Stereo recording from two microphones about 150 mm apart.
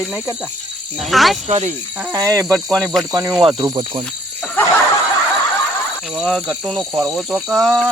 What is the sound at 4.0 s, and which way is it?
Cricket, 5° left (ahead or behind).